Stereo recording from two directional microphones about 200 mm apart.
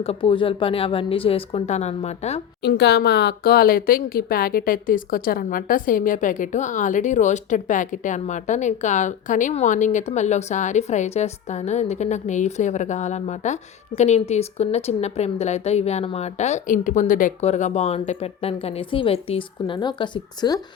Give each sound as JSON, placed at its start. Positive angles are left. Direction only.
{"t": 0.0, "sound": "a woman's voice", "side_deg": 30}
{"t": 2.6, "sound": "speech", "side_deg": 55}